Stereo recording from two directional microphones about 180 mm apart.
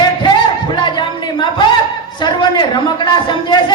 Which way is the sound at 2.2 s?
25° left (ahead or behind).